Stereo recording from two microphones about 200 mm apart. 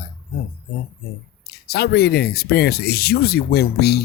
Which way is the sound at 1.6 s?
50° left (ahead or behind).